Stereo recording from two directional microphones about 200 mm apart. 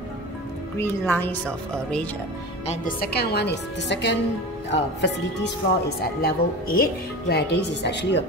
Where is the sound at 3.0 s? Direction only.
55° left (ahead or behind).